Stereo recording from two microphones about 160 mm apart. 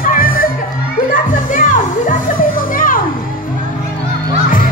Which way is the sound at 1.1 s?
55° left (ahead or behind).